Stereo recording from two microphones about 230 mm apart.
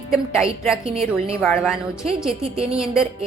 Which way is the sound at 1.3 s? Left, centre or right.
Centre.